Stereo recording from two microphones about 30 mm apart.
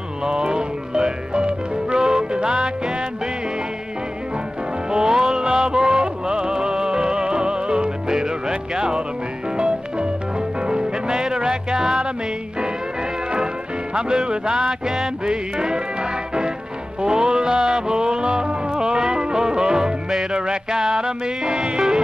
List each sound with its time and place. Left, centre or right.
0.2 s music: right
4.9 s music: right
13.9 s speech: right
15.2 s music: right
21.5 s speech: right